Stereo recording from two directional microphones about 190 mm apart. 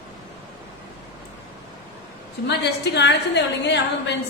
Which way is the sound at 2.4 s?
65° left (ahead or behind).